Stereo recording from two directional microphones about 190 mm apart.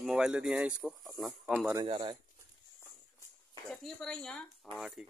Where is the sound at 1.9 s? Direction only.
30° right (ahead or behind).